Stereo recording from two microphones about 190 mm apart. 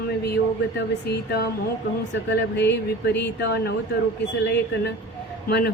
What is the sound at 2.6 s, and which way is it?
Speech, 60° left (ahead or behind).